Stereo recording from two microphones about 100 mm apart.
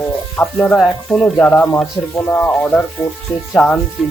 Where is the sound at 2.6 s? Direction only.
10° left (ahead or behind).